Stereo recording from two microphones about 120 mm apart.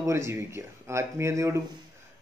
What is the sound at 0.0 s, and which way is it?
Speech, 25° right (ahead or behind).